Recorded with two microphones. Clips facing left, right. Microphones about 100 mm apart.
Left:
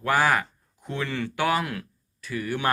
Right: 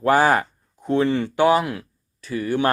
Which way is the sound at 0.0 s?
35° right (ahead or behind).